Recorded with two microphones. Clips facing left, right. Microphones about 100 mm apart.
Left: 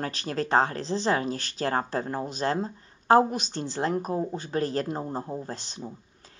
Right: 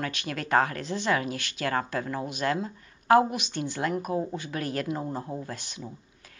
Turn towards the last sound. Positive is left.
turn(degrees=30)  # may be behind; listen again after turning